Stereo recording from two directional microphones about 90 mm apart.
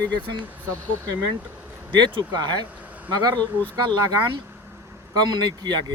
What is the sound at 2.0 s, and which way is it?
Speech, 55° right (ahead or behind).